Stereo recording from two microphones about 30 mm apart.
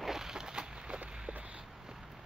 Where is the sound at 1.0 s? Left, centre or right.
Right.